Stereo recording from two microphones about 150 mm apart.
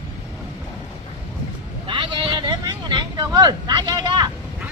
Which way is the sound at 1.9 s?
35° right (ahead or behind).